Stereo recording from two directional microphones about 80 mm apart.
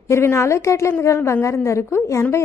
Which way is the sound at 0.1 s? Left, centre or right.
Left.